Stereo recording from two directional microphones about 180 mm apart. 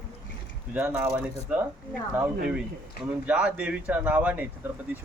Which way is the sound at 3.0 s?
5° right (ahead or behind).